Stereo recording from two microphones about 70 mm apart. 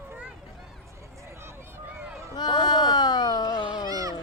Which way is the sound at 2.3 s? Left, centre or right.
Left.